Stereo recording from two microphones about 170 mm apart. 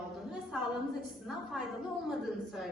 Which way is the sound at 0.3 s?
Centre (ahead or behind).